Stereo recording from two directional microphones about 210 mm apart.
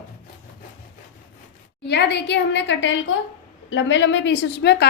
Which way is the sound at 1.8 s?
50° left (ahead or behind).